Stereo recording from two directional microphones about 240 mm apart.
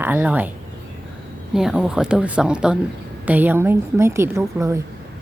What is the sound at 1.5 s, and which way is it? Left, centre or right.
A woman's voice, centre.